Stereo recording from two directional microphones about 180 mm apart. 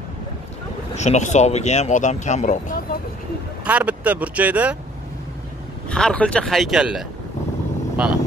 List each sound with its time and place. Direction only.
0.9 s speech: 40° left (ahead or behind)
3.6 s speech: 10° right (ahead or behind)
5.9 s speech: 5° left (ahead or behind)